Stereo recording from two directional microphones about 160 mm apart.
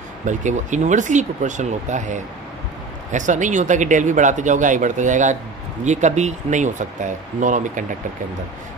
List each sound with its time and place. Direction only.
0.3 s speech: 50° right (ahead or behind)